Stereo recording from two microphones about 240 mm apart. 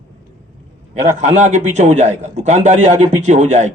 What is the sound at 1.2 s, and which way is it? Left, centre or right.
A man's voice, right.